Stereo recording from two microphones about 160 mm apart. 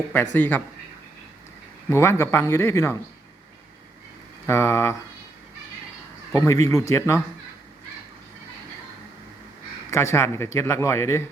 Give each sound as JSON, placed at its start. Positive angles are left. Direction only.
{"t": 0.3, "sound": "speech", "side_deg": 10}
{"t": 1.9, "sound": "speech", "side_deg": 15}
{"t": 4.4, "sound": "speech", "side_deg": 15}
{"t": 6.3, "sound": "speech", "side_deg": 20}
{"t": 9.9, "sound": "speech", "side_deg": 15}